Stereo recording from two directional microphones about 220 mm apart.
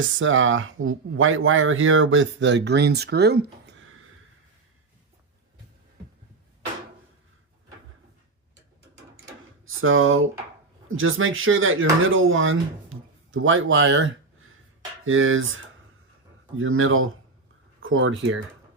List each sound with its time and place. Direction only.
0.2 s speech: 60° right (ahead or behind)
9.6 s speech: 65° right (ahead or behind)